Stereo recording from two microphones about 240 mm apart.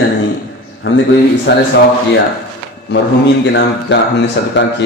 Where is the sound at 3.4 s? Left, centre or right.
Left.